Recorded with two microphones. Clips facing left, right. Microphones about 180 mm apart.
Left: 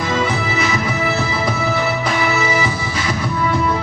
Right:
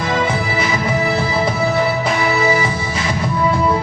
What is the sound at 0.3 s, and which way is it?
Music, 25° right (ahead or behind).